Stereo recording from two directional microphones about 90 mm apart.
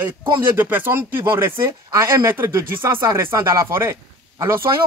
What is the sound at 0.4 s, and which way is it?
Speech, 20° right (ahead or behind).